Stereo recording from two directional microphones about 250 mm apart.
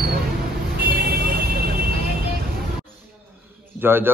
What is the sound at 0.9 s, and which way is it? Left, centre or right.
Vehicle, right.